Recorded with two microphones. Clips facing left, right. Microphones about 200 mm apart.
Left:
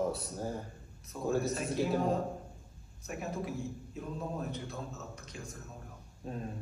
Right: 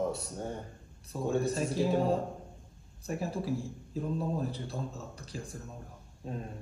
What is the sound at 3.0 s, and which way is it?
A man's voice, 30° right (ahead or behind).